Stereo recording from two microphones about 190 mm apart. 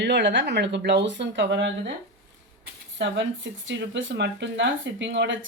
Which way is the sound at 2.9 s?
75° right (ahead or behind).